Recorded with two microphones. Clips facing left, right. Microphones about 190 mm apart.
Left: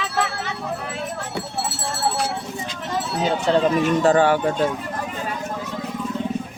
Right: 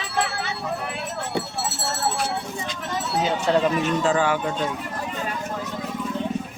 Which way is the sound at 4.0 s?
55° left (ahead or behind).